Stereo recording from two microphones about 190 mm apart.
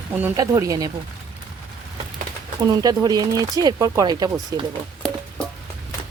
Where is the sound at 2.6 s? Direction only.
20° right (ahead or behind).